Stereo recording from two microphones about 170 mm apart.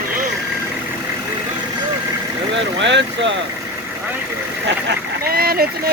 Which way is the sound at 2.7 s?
90° right.